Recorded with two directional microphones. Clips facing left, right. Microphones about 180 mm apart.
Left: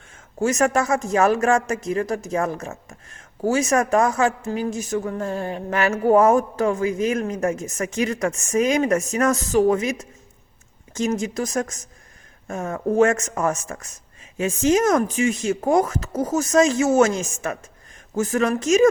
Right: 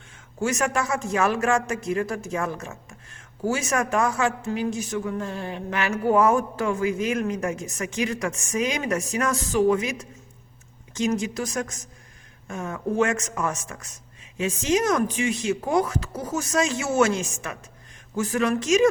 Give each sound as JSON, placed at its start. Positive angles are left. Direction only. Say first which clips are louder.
{"t": 0.3, "sound": "a man's voice", "louder": "left 5 dB", "side_deg": 40}